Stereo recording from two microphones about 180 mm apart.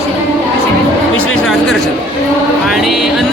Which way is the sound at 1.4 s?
Centre (ahead or behind).